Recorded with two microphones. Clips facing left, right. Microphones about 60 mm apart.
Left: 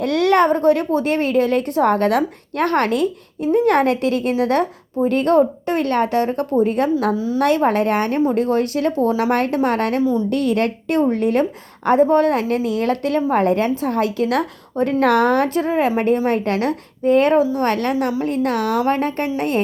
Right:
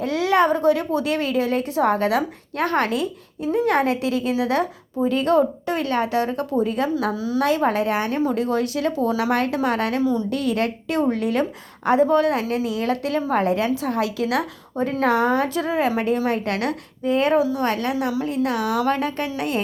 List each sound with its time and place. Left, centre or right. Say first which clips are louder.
0.0 s a woman's voice: left 4 dB; left
10.0 s a woman's voice: left 3 dB; left
10.2 s a woman's voice: left 4 dB; left
15.4 s a woman's voice: left 3 dB; left